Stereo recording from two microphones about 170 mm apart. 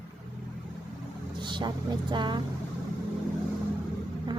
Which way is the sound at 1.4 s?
25° right (ahead or behind).